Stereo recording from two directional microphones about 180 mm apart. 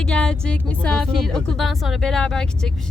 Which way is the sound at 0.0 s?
5° left (ahead or behind).